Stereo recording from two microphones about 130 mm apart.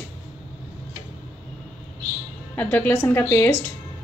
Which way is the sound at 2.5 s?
10° left (ahead or behind).